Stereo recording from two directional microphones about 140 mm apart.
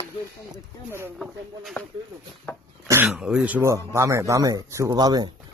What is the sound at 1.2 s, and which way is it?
Speech, centre (ahead or behind).